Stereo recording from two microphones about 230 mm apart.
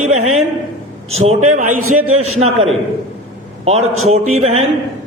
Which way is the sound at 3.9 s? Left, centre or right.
Right.